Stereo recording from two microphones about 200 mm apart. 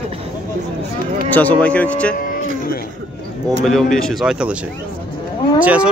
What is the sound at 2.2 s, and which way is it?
Speech, 45° left (ahead or behind).